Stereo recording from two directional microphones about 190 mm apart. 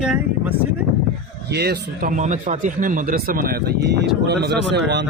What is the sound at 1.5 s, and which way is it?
A man's voice, 60° right (ahead or behind).